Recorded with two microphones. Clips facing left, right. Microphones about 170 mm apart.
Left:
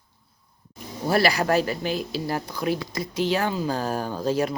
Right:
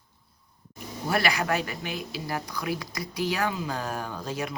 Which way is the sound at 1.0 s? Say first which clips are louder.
Left 5 dB; 35° left (ahead or behind).